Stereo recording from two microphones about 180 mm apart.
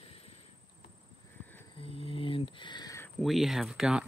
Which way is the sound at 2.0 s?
30° left (ahead or behind).